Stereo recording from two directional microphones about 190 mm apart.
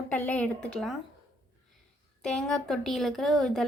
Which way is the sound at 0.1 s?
5° left (ahead or behind).